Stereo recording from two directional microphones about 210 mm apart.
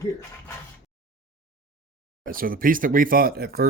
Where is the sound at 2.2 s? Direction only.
45° right (ahead or behind).